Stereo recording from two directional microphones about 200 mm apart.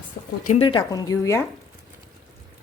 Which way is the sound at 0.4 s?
30° left (ahead or behind).